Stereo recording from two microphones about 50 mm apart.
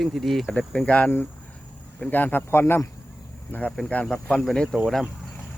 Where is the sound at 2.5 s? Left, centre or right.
Left.